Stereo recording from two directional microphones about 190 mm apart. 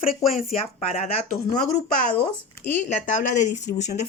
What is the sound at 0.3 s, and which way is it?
Speech, 35° left (ahead or behind).